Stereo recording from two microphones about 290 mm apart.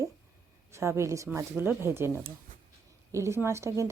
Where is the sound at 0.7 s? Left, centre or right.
Centre.